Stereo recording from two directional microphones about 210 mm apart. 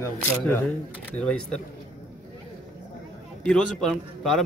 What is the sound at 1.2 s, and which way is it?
Speech, 5° left (ahead or behind).